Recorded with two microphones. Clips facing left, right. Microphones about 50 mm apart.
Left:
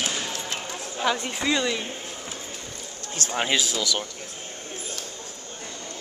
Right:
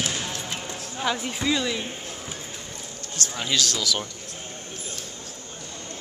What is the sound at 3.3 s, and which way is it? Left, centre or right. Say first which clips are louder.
Speech: left 4 dB; left.